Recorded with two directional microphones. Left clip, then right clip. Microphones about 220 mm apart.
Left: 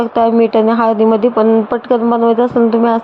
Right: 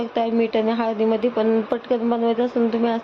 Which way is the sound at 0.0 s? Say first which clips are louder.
Left 10 dB; 20° left (ahead or behind).